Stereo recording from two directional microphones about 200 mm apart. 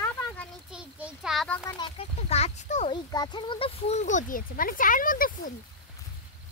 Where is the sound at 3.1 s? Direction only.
20° left (ahead or behind); by 5.3 s 45° left (ahead or behind).